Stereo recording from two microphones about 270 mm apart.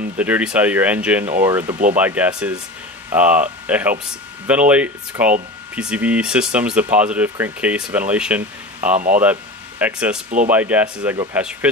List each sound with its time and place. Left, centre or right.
0.2 s speech: centre
8.9 s speech: right
9.2 s speech: centre